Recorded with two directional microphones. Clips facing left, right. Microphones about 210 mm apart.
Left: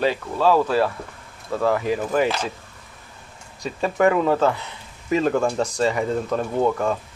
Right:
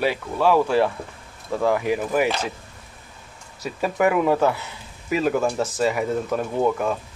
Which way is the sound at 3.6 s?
10° right (ahead or behind).